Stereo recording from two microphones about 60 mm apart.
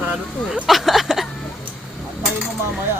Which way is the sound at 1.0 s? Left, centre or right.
Centre.